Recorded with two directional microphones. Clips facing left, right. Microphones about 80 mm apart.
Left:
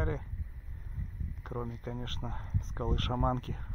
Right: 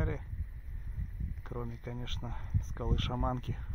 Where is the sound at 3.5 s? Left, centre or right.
Left.